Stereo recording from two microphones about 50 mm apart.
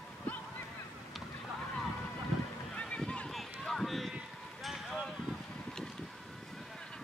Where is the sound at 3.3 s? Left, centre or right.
Centre.